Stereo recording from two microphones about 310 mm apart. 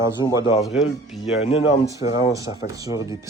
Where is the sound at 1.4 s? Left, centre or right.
Centre.